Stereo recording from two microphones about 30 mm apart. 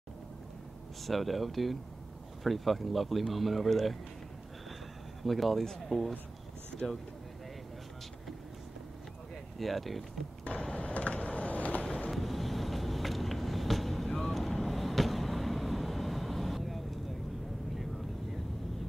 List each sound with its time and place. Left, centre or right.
1.0 s speech: centre
5.2 s speech: centre
9.6 s speech: centre
10.5 s a sound: left
12.1 s vehicle: centre
14.0 s boat: centre
14.7 s vehicle: centre